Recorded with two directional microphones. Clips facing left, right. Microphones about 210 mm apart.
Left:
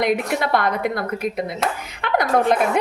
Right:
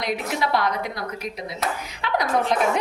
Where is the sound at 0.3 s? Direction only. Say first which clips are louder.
Left 3 dB; 55° left (ahead or behind).